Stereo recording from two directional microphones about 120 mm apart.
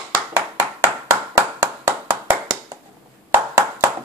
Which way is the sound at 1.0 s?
30° right (ahead or behind).